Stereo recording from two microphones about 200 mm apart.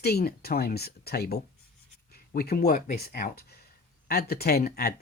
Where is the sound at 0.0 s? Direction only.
50° left (ahead or behind).